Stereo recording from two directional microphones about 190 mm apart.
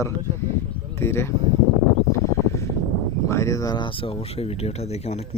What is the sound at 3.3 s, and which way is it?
Speech, 15° left (ahead or behind).